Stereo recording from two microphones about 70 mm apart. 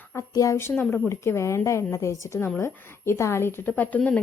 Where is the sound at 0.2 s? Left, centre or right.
Left.